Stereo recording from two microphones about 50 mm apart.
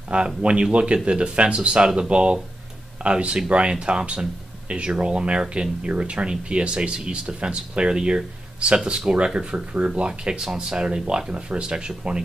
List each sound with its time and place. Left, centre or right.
0.4 s speech: right